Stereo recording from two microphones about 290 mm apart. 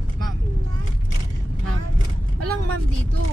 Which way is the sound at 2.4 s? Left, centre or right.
Right.